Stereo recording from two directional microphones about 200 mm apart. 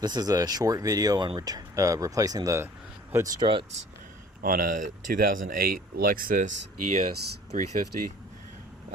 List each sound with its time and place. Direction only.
0.0 s speech: 20° right (ahead or behind)
4.4 s speech: 45° right (ahead or behind)